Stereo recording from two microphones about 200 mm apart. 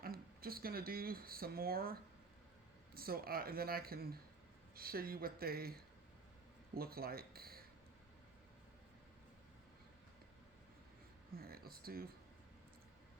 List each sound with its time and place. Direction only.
0.0 s speech: 50° right (ahead or behind)
6.7 s speech: 50° right (ahead or behind)
11.3 s speech: 50° right (ahead or behind)